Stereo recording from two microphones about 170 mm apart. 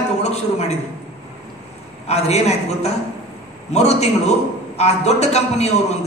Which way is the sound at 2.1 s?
40° left (ahead or behind).